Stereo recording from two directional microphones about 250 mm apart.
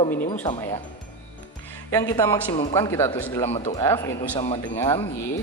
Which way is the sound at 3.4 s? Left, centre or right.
Left.